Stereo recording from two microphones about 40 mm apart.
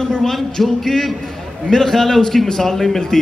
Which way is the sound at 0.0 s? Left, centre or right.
Centre.